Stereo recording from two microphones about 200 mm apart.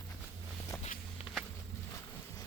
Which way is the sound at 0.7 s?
15° left (ahead or behind).